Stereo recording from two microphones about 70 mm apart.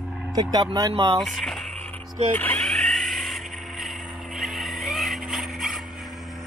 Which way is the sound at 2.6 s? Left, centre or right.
Centre.